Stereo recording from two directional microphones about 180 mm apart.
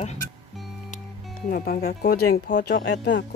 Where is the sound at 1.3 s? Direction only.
55° left (ahead or behind); by 3.2 s 80° left.